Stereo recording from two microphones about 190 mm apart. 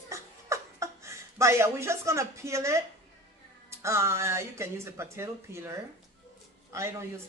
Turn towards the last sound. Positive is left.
turn(degrees=-15)  # may be behind; listen again after turning